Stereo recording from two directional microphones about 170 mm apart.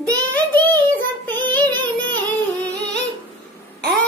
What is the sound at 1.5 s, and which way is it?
Child singing, 10° left (ahead or behind).